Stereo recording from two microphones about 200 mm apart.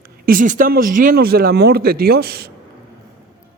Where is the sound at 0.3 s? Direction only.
40° right (ahead or behind).